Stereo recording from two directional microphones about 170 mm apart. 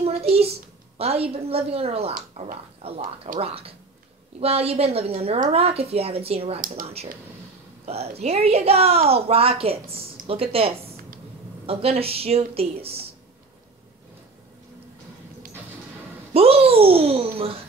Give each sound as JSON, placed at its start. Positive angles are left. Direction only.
{"t": 0.0, "sound": "a sound", "side_deg": -35}
{"t": 0.9, "sound": "speech", "side_deg": -35}
{"t": 2.1, "sound": "speech", "side_deg": -45}
{"t": 6.6, "sound": "speech", "side_deg": -55}
{"t": 7.8, "sound": "speech", "side_deg": -40}
{"t": 16.3, "sound": "speech", "side_deg": -35}